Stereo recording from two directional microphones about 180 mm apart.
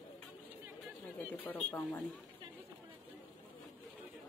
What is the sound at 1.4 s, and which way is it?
Speech, 10° left (ahead or behind).